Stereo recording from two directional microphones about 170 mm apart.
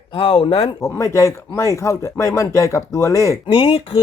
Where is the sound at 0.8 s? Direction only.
20° left (ahead or behind).